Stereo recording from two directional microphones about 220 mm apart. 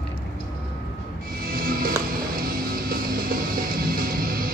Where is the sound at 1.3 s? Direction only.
40° right (ahead or behind).